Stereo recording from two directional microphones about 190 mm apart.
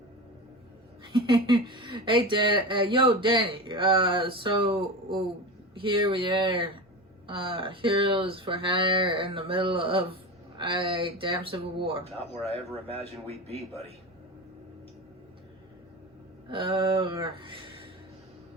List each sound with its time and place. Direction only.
1.0 s speech: 25° right (ahead or behind)
16.5 s speech: 25° right (ahead or behind)